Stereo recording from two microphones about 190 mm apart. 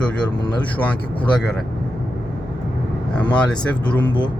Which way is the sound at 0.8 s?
10° left (ahead or behind).